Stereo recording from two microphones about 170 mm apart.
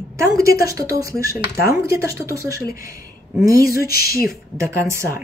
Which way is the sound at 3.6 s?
60° left (ahead or behind).